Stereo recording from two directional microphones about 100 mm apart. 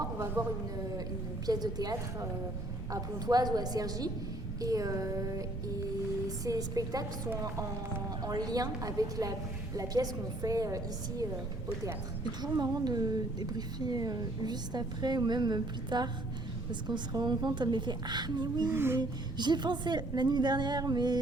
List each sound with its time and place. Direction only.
0.4 s a woman's voice: 35° right (ahead or behind)
8.2 s a woman's voice: 40° right (ahead or behind)
12.4 s speech: 45° right (ahead or behind)
18.7 s a sound: 25° right (ahead or behind)
18.9 s speech: 45° right (ahead or behind)